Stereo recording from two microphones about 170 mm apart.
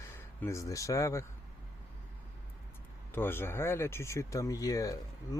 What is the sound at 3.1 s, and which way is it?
Speech, 15° left (ahead or behind).